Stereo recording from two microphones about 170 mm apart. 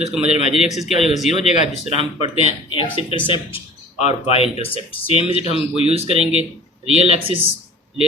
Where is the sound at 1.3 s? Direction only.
40° left (ahead or behind).